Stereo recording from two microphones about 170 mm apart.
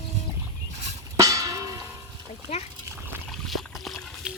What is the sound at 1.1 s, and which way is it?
Music, 20° right (ahead or behind).